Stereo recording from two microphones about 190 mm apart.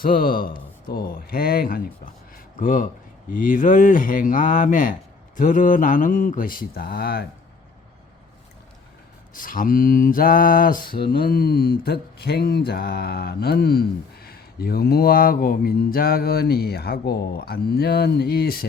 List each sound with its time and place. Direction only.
0.0 s speech: 50° left (ahead or behind)
9.3 s speech: 45° left (ahead or behind)
11.1 s a sound: 50° left (ahead or behind)